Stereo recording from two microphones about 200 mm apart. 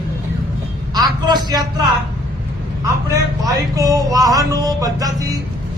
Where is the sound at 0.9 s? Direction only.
20° right (ahead or behind).